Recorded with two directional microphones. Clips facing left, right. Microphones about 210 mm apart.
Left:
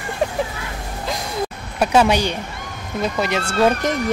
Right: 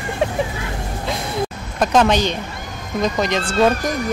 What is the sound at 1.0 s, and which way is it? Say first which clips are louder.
Music: right 1 dB; centre (ahead or behind).